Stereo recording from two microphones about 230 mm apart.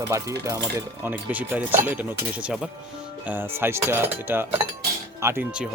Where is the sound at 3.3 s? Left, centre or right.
Centre.